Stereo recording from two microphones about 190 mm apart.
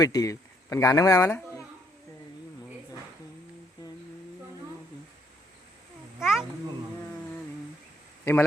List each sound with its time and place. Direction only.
0.0 s speech: 20° left (ahead or behind)
6.1 s a sound: centre (ahead or behind)
8.2 s a man's voice: 10° left (ahead or behind)